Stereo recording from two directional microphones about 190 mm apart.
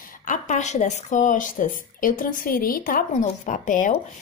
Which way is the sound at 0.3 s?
40° left (ahead or behind).